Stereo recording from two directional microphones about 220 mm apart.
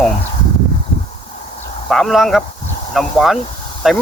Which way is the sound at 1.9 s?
Centre (ahead or behind).